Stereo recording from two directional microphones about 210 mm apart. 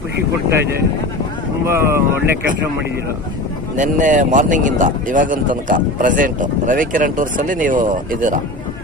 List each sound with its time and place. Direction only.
1.6 s speech: 10° right (ahead or behind)
3.8 s speech: 35° right (ahead or behind)